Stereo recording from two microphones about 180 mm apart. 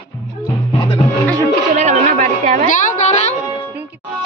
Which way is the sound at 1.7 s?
40° right (ahead or behind).